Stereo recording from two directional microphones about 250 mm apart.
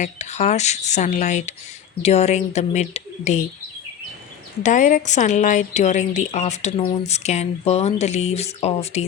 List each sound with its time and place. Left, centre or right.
0.0 s a woman's voice: left
4.6 s a woman's voice: left